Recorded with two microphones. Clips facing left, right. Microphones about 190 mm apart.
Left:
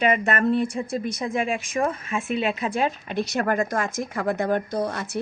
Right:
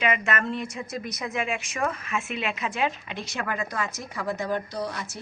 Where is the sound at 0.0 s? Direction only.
40° left (ahead or behind).